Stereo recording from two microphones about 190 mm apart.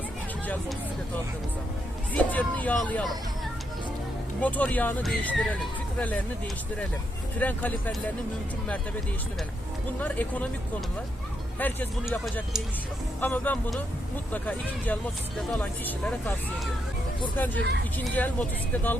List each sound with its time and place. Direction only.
2.1 s speech: 10° left (ahead or behind)
4.4 s speech: 10° left (ahead or behind)
7.3 s speech: 10° left (ahead or behind)
10.0 s speech: 10° left (ahead or behind)
11.6 s speech: 10° left (ahead or behind)
17.3 s speech: 10° left (ahead or behind)
17.6 s speech: 65° right (ahead or behind)
17.9 s speech: 10° left (ahead or behind)